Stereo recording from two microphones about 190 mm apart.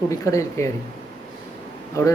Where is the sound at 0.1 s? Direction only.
15° left (ahead or behind).